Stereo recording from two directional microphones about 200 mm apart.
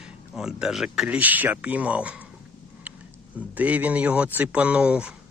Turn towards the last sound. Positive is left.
turn(degrees=-5)  # may be behind; listen again after turning